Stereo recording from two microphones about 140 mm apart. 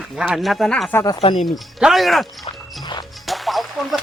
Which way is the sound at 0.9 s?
15° left (ahead or behind).